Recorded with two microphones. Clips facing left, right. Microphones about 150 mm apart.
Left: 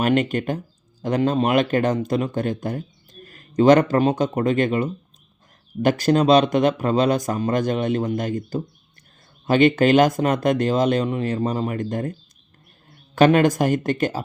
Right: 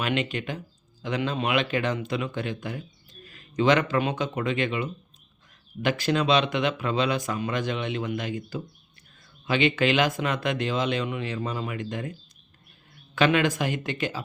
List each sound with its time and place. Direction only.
0.0 s speech: 45° left (ahead or behind)
13.1 s speech: 45° left (ahead or behind)